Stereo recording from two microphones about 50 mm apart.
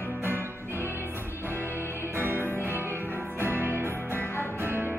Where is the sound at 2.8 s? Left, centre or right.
Right.